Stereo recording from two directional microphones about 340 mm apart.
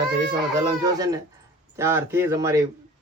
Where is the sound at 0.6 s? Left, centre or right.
Centre.